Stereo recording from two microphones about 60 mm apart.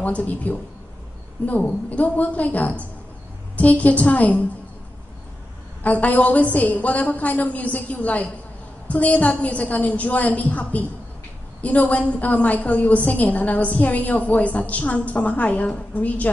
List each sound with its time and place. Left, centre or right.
0.0 s a woman's voice: left
5.9 s a woman's voice: left